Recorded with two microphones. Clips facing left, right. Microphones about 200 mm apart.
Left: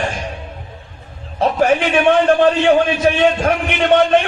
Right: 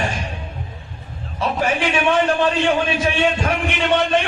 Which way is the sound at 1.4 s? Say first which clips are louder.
Left 6 dB; 55° left (ahead or behind).